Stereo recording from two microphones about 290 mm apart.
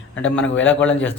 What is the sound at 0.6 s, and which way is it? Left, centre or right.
Speech, centre.